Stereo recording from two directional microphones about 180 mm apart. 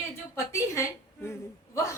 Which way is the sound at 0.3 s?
15° left (ahead or behind).